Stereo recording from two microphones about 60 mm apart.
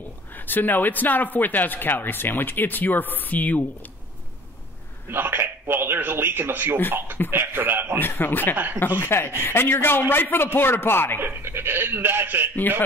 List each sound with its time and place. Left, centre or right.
0.3 s a man's voice: left
5.1 s a man's voice: right
8.0 s a man's voice: left
11.1 s a man's voice: right